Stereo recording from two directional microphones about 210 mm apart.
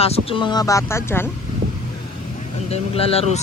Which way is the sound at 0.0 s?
25° left (ahead or behind).